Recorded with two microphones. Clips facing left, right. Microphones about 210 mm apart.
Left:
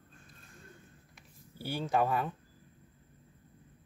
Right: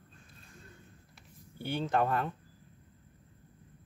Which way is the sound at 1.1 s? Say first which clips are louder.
Right 1 dB; 5° left (ahead or behind).